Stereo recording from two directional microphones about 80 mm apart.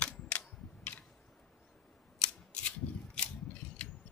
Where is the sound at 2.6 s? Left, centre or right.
Centre.